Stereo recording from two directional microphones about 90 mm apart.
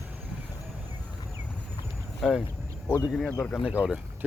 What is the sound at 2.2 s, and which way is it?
Speech, centre (ahead or behind).